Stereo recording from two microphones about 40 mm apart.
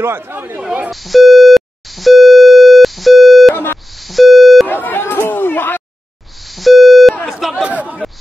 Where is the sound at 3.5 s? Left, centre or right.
Left.